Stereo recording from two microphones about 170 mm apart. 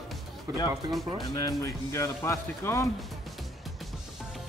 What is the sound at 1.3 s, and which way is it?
Speech, 20° left (ahead or behind).